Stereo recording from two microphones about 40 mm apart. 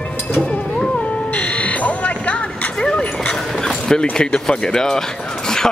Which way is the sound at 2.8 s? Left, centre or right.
Left.